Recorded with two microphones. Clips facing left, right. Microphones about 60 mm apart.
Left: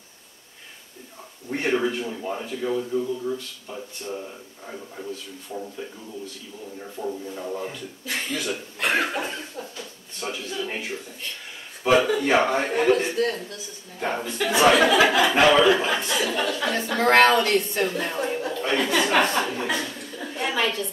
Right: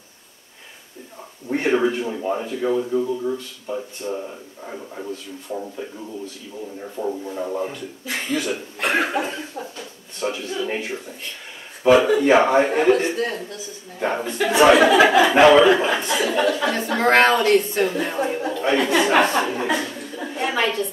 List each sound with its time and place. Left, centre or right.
1.5 s a man's voice: centre
7.0 s speech: right
8.1 s speech: centre
11.9 s a man's voice: centre